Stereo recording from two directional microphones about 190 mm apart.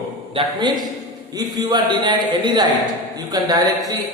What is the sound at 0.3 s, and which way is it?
A man's voice, 25° right (ahead or behind).